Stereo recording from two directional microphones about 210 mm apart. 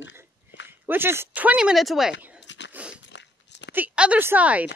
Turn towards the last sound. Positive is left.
turn(degrees=-5)  # may be behind; listen again after turning